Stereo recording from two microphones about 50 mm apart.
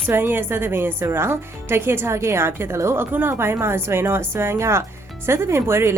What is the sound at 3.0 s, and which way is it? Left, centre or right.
Speech, right.